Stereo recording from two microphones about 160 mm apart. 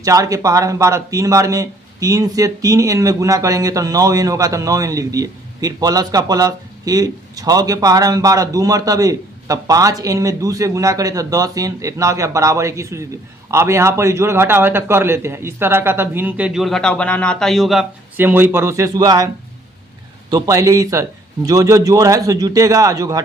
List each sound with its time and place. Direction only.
0.0 s a man's voice: 20° right (ahead or behind); by 17.8 s centre (ahead or behind)
18.2 s a man's voice: 10° right (ahead or behind)
20.3 s speech: 20° right (ahead or behind)